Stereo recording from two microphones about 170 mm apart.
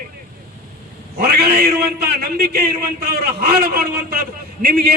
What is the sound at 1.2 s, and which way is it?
A man's voice, 65° right (ahead or behind).